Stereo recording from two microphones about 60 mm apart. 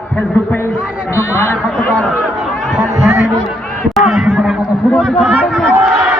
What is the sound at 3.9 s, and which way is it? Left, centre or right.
Speech, centre.